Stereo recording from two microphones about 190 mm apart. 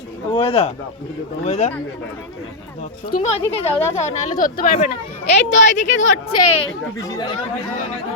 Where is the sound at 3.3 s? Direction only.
30° left (ahead or behind); by 4.7 s 45° left (ahead or behind).